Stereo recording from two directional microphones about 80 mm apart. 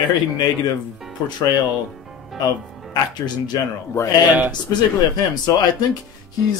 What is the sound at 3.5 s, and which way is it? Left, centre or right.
Speech, left.